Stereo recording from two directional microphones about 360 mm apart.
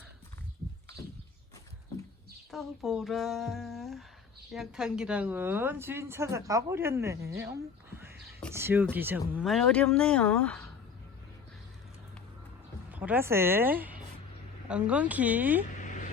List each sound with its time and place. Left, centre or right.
2.5 s a woman's voice: centre
12.9 s speech: centre
15.8 s vehicle: left